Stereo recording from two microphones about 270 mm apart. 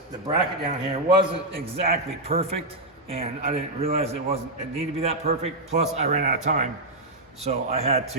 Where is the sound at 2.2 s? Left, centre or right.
Right.